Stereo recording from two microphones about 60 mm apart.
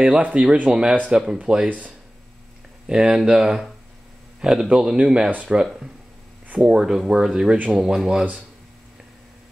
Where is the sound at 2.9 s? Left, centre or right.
Centre.